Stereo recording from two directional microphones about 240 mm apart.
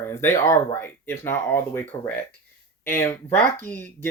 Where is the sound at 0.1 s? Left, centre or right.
Centre.